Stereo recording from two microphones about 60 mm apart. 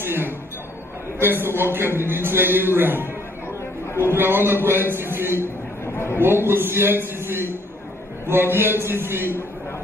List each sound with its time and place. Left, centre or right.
0.0 s chink: right
1.2 s a man's voice: right
5.9 s a sound: left
6.2 s a man's voice: right